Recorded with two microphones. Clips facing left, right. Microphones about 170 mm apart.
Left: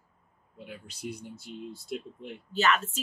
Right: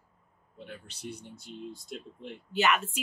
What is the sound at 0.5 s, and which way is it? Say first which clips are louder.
Speech: left 1 dB; 10° left (ahead or behind).